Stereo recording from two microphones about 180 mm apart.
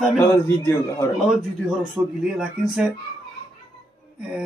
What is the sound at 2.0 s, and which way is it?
Speech, 10° right (ahead or behind).